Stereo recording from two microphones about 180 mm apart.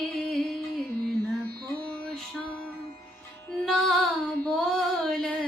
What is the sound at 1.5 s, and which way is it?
Music, 60° right (ahead or behind).